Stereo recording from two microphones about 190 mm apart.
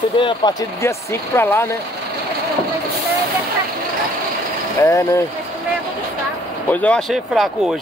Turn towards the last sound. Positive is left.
turn(degrees=0)  # may be behind; listen again after turning